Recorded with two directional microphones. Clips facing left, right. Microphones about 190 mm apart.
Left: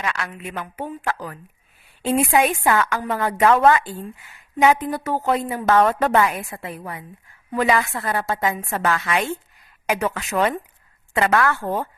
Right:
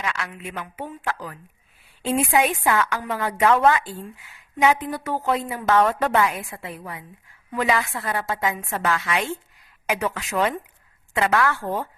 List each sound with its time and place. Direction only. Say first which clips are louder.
0.0 s a woman's voice: left 2 dB; 50° left (ahead or behind)